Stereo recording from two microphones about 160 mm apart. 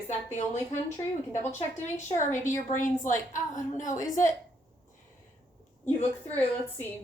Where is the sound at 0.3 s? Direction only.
50° left (ahead or behind).